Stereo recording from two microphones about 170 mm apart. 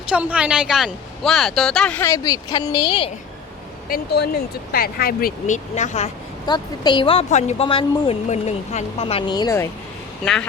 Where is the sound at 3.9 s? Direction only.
70° left (ahead or behind); by 6.1 s 40° left (ahead or behind).